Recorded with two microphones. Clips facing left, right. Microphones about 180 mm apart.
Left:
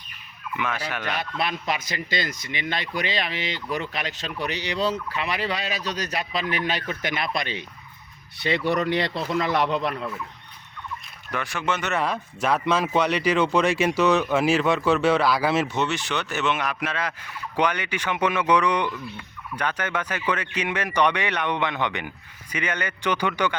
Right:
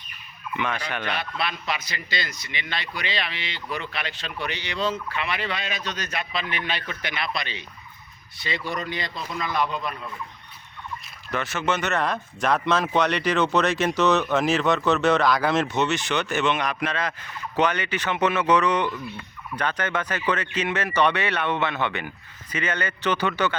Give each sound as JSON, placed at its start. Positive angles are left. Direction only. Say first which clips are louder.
{"t": 0.5, "sound": "speech", "louder": "even", "side_deg": 5}
{"t": 1.0, "sound": "speech", "louder": "left 3 dB", "side_deg": 45}
{"t": 8.4, "sound": "speech", "louder": "left 7 dB", "side_deg": 65}
{"t": 11.3, "sound": "speech", "louder": "right 2 dB", "side_deg": 10}